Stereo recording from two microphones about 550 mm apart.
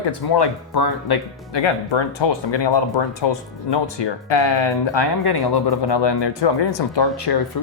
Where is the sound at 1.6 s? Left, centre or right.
Left.